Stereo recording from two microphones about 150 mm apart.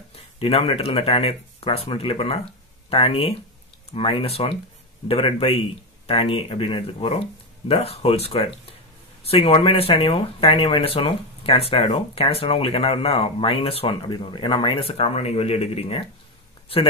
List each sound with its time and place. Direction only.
0.1 s speech: 40° left (ahead or behind)